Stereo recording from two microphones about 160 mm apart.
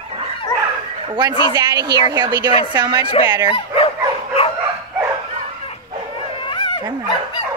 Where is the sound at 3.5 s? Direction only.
35° left (ahead or behind).